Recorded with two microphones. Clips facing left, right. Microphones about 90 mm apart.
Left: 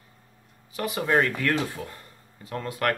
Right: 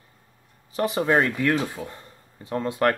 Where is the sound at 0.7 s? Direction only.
30° right (ahead or behind).